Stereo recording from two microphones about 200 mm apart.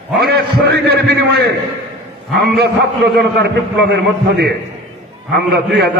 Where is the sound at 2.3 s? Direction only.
55° right (ahead or behind).